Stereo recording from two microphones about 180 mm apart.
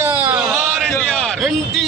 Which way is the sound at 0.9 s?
5° left (ahead or behind).